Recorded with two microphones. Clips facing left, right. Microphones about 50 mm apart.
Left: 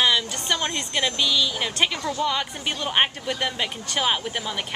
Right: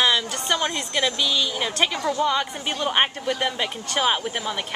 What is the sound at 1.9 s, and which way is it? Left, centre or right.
Speech, right.